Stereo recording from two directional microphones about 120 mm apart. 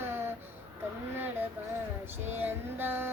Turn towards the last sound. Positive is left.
turn(degrees=-15)  # may be behind; listen again after turning